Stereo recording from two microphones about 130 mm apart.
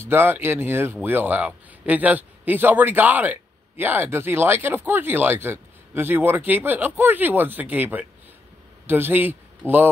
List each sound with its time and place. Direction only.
0.0 s a man's voice: 15° right (ahead or behind)
9.6 s speech: 15° left (ahead or behind)